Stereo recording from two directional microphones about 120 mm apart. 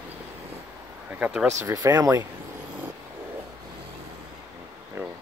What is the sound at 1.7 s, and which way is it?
Speech, 30° right (ahead or behind).